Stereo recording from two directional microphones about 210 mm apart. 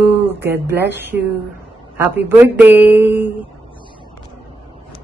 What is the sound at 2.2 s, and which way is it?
Speech, 10° right (ahead or behind).